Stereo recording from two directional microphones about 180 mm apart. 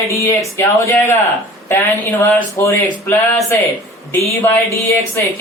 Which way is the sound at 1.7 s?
15° left (ahead or behind).